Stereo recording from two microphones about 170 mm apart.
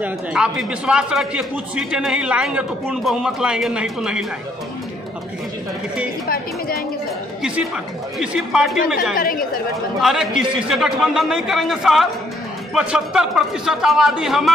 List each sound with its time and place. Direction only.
0.0 s speech: 5° right (ahead or behind)
6.2 s a woman's voice: 60° left (ahead or behind)
8.2 s speech: 5° right (ahead or behind)
9.1 s a woman's voice: 60° left (ahead or behind)
10.0 s speech: centre (ahead or behind)